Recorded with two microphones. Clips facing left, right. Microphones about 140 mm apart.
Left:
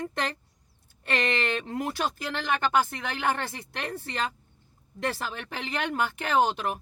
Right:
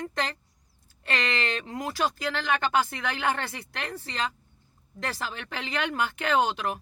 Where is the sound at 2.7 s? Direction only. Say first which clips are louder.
Even; 50° left (ahead or behind).